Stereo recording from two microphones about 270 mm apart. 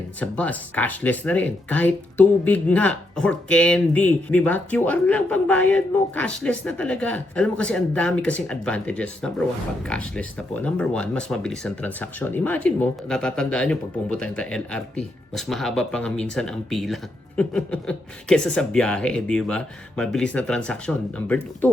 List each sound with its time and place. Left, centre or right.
0.2 s speech: centre